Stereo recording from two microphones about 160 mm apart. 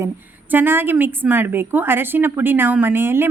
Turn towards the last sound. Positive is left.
turn(degrees=-15)  # may be behind; listen again after turning